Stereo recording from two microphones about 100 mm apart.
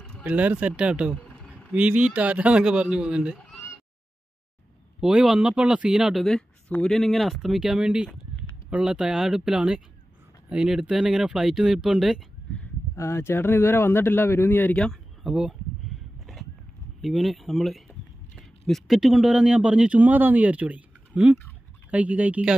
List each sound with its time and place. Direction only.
0.2 s a man's voice: 15° right (ahead or behind)
5.0 s a man's voice: 5° right (ahead or behind)
12.9 s a man's voice: 30° left (ahead or behind)
14.9 s a sound: 5° right (ahead or behind)
17.0 s a man's voice: centre (ahead or behind)